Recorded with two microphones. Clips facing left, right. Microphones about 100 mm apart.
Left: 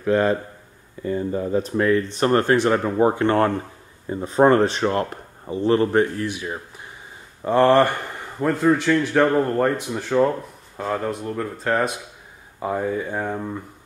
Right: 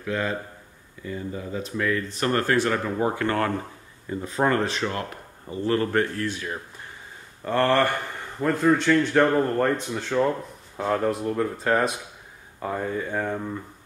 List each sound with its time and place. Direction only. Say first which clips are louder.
0.0 s a man's voice: left 8 dB; 40° left (ahead or behind)
5.5 s speech: left 5 dB; 25° left (ahead or behind)
8.4 s speech: left 2 dB; 5° left (ahead or behind)
12.5 s speech: left 4 dB; 15° left (ahead or behind)